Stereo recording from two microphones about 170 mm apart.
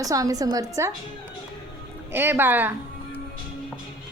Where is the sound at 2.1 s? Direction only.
10° right (ahead or behind).